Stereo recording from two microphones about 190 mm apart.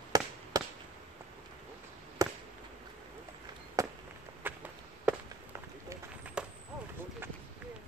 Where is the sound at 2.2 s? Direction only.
15° right (ahead or behind).